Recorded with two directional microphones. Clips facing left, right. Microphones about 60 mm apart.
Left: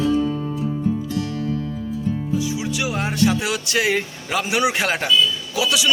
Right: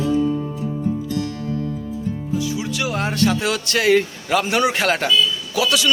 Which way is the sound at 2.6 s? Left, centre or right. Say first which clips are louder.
Right 1 dB; centre.